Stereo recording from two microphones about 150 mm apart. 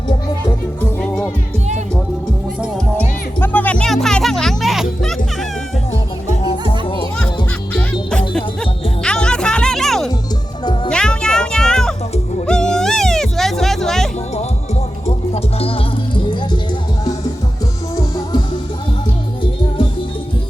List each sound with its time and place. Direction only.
0.8 s music: 10° left (ahead or behind)
3.4 s music: 10° left (ahead or behind)
6.3 s music: 40° left (ahead or behind)
9.0 s music: 5° left (ahead or behind)
15.0 s music: 40° left (ahead or behind)
17.9 s music: 30° left (ahead or behind)